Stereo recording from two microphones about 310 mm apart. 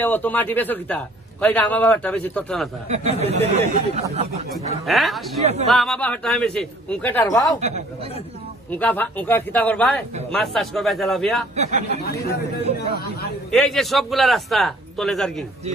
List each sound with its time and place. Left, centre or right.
0.0 s a man's voice: centre
2.9 s speech: right
4.8 s a man's voice: centre
5.4 s speech: right
5.7 s a man's voice: centre
8.6 s a man's voice: centre
11.5 s speech: right
12.0 s a man's voice: left
13.7 s a man's voice: centre